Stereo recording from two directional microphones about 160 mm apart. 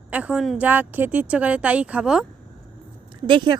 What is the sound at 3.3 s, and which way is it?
Speech, 30° right (ahead or behind).